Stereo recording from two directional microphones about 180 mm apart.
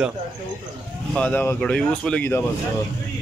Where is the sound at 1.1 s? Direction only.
10° left (ahead or behind).